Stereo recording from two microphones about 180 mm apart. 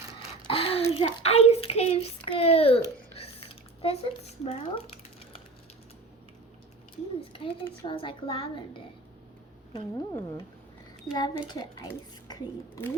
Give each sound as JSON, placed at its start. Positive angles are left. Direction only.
{"t": 0.4, "sound": "a child's voice", "side_deg": 30}
{"t": 7.9, "sound": "a child's voice", "side_deg": 30}
{"t": 9.7, "sound": "a child's voice", "side_deg": 20}